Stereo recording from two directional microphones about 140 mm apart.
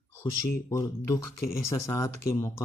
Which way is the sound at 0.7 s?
20° left (ahead or behind).